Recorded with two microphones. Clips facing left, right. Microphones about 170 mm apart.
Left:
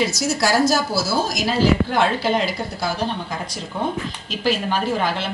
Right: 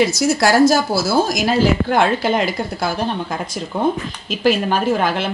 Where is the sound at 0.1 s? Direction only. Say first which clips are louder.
Right 5 dB; 55° right (ahead or behind).